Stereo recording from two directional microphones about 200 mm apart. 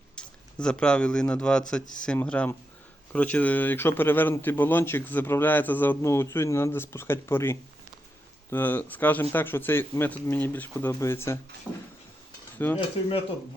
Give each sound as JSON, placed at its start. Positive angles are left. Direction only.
{"t": 0.2, "sound": "speech", "side_deg": 5}
{"t": 11.7, "sound": "a sound", "side_deg": 5}
{"t": 12.6, "sound": "speech", "side_deg": 10}